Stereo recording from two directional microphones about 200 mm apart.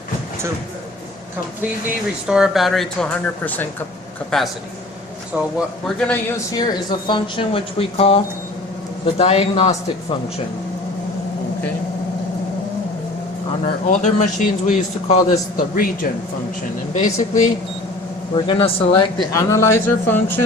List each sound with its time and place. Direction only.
2.2 s speech: 5° right (ahead or behind)
5.3 s speech: 10° right (ahead or behind)
6.0 s speech: 5° left (ahead or behind)
6.5 s a man's voice: 20° left (ahead or behind)
13.8 s a man's voice: 35° left (ahead or behind)
18.3 s speech: 25° left (ahead or behind)